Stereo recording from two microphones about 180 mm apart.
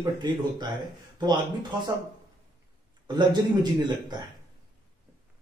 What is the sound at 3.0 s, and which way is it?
Speech, 25° right (ahead or behind).